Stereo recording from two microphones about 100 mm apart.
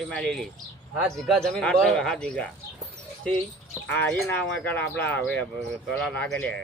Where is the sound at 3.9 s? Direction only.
15° left (ahead or behind).